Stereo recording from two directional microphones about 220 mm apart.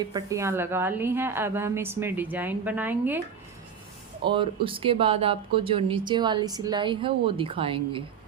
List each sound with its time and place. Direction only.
0.0 s a woman's voice: 20° right (ahead or behind)
4.2 s speech: 20° right (ahead or behind)